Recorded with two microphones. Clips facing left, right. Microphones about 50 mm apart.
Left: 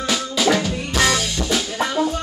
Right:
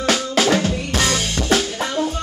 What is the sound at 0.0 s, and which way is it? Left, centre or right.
Drum, right.